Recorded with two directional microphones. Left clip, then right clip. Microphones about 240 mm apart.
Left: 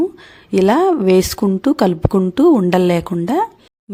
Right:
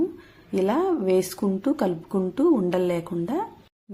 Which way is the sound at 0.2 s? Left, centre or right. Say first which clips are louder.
Left 10 dB; left.